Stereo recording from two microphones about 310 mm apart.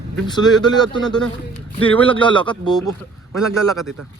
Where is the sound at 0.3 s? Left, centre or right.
Centre.